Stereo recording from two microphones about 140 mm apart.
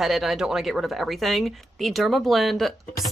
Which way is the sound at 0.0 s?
Centre (ahead or behind).